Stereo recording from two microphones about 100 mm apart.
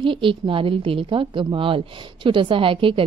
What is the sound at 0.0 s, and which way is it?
A woman's voice, 60° right (ahead or behind).